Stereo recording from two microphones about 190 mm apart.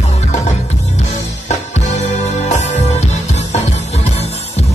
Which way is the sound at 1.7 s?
35° left (ahead or behind).